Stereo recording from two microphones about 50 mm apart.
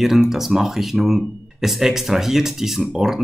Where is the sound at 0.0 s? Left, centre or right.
Centre.